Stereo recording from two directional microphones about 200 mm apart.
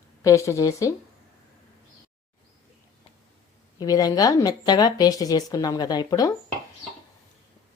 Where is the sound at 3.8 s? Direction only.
20° left (ahead or behind).